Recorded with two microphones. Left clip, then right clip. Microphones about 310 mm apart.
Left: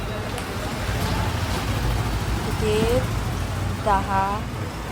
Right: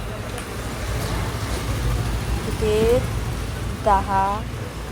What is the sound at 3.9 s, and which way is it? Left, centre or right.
Speech, centre.